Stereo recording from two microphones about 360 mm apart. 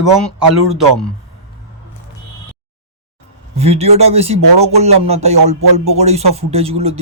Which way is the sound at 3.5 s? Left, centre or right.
Centre.